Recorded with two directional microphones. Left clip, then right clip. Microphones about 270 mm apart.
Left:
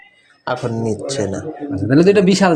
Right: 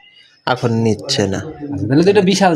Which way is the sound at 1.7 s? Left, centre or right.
Centre.